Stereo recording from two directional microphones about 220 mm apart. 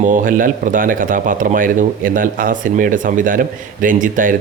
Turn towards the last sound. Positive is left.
turn(degrees=-40)  # may be behind; listen again after turning